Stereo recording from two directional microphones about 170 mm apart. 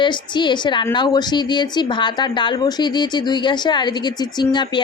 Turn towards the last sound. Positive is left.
turn(degrees=25)  # may be behind; listen again after turning